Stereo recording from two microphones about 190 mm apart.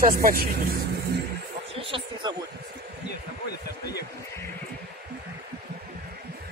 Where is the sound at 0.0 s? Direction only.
50° right (ahead or behind).